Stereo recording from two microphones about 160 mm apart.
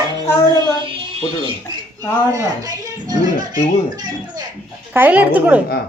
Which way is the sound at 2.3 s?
25° right (ahead or behind).